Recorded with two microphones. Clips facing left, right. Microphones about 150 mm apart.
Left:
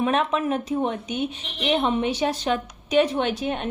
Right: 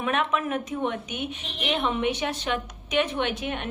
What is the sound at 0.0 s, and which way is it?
A woman's voice, 35° left (ahead or behind).